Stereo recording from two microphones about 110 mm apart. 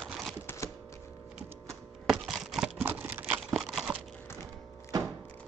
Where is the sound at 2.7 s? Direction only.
15° right (ahead or behind).